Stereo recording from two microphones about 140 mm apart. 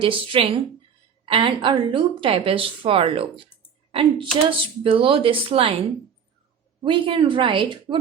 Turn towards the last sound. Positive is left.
turn(degrees=-35)  # may be behind; listen again after turning